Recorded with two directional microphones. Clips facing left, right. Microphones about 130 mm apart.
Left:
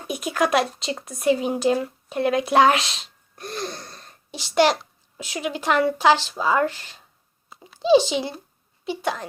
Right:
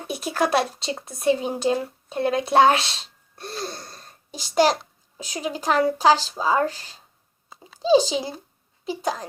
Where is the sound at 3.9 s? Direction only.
45° right (ahead or behind).